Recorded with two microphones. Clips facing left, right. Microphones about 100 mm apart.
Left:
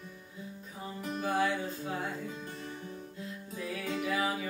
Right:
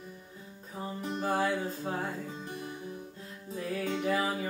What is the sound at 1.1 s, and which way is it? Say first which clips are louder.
Music: right 1 dB; 35° right (ahead or behind).